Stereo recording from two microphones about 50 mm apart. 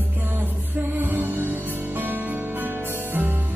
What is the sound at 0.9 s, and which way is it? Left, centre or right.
Music, right.